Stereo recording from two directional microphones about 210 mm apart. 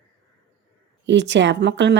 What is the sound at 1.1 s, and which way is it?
Speech, 60° right (ahead or behind).